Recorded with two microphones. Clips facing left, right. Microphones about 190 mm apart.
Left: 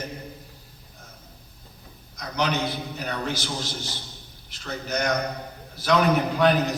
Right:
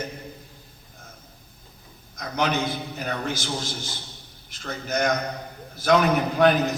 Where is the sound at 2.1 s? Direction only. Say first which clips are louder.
Right 1 dB; 50° right (ahead or behind).